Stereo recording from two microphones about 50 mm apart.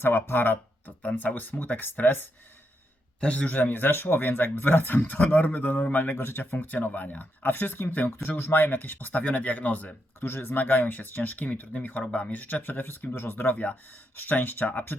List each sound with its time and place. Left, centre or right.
0.0 s speech: left
3.2 s speech: left
10.2 s speech: left
13.4 s speech: left